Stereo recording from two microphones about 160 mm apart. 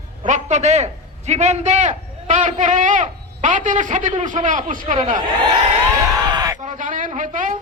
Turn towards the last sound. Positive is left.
turn(degrees=-55)  # may be behind; listen again after turning